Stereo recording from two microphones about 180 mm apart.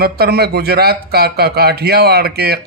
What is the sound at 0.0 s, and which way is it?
Speech, 60° right (ahead or behind).